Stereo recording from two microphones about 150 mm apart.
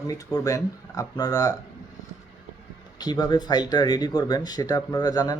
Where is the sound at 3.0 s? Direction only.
25° left (ahead or behind).